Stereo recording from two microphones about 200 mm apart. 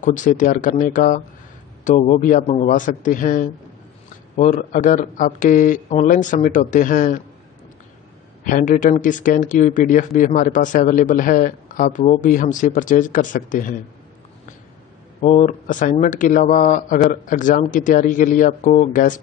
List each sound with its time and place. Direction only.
0.0 s speech: 40° left (ahead or behind)
8.5 s speech: 40° left (ahead or behind)
15.2 s speech: 40° left (ahead or behind)